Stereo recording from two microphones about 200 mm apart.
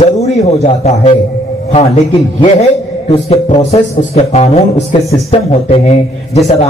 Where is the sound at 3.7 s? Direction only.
35° left (ahead or behind).